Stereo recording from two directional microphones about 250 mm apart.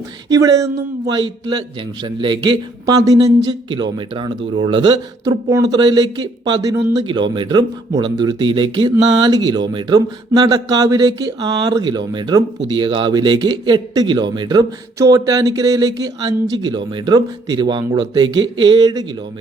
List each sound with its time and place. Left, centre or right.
0.3 s a man's voice: centre